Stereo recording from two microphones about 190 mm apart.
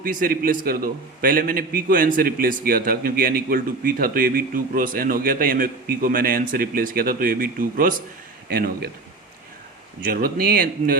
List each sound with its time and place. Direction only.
0.0 s a man's voice: 45° right (ahead or behind)
10.1 s a man's voice: 50° right (ahead or behind)